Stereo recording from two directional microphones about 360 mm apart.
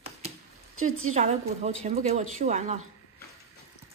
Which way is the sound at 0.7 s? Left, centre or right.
Right.